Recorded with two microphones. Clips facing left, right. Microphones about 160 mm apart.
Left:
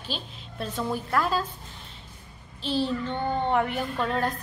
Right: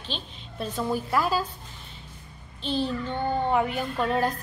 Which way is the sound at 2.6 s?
Centre (ahead or behind).